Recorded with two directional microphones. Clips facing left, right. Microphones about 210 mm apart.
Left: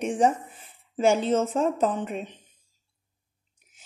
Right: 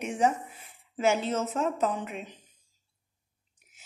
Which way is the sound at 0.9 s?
30° left (ahead or behind).